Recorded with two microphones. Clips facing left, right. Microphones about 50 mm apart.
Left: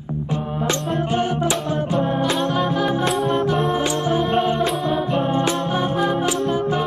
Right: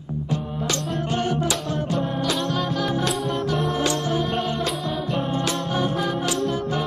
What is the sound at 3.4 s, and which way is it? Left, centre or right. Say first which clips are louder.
Music: left 4 dB; left.